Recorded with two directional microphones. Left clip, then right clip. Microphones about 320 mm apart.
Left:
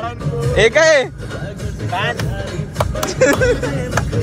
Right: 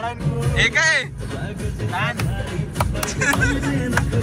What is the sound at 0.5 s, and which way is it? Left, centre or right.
Speech, centre.